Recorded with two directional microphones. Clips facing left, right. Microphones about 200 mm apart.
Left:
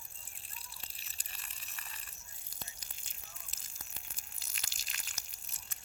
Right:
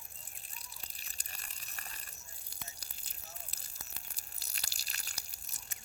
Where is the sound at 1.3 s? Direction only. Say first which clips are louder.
Right 2 dB; 40° right (ahead or behind).